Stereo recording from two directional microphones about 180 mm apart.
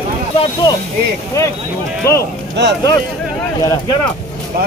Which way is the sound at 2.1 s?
15° left (ahead or behind).